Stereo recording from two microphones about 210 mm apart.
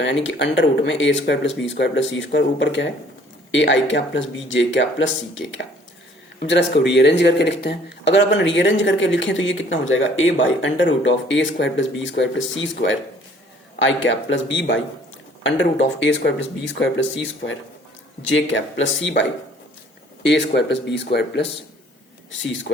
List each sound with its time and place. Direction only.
0.0 s speech: 60° left (ahead or behind)
20.2 s speech: 55° left (ahead or behind)